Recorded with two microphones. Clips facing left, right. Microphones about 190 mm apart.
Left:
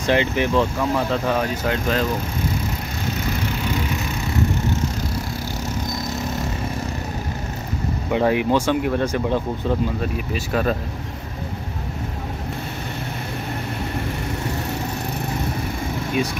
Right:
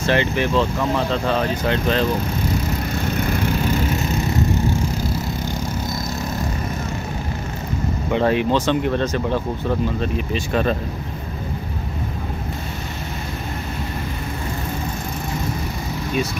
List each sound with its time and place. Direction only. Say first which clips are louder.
0.0 s speech: even; 15° left (ahead or behind)
8.1 s speech: even; 15° left (ahead or behind)